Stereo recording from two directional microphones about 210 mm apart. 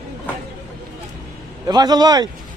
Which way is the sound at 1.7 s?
20° right (ahead or behind).